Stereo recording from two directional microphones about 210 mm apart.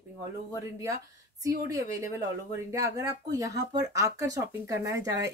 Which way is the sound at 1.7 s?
15° right (ahead or behind).